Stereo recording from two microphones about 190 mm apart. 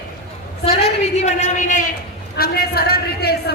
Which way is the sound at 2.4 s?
55° left (ahead or behind).